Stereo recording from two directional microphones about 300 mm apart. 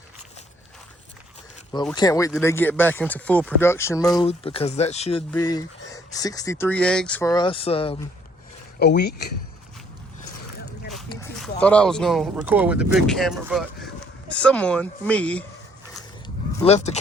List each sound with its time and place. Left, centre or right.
2.0 s speech: centre
8.8 s speech: left
11.3 s speech: centre
16.6 s speech: left